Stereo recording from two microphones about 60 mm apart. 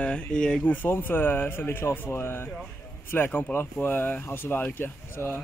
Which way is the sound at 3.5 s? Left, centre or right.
Centre.